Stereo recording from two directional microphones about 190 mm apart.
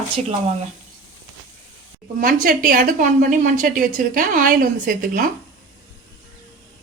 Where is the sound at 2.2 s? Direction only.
50° right (ahead or behind).